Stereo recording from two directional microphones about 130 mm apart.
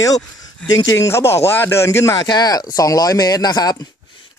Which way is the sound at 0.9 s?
25° left (ahead or behind).